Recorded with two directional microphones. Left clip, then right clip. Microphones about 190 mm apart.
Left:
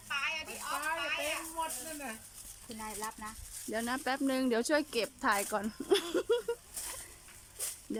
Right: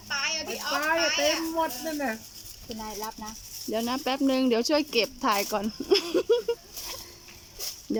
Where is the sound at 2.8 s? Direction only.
20° right (ahead or behind).